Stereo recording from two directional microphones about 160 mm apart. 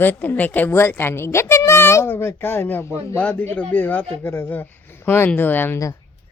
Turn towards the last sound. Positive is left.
turn(degrees=15)  # may be behind; listen again after turning